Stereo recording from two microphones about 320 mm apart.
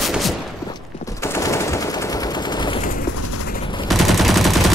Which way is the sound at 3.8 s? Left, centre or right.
Centre.